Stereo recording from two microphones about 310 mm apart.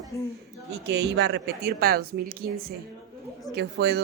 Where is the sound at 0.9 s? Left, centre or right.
Right.